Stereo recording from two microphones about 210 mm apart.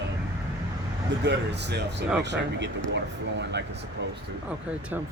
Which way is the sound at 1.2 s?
55° right (ahead or behind).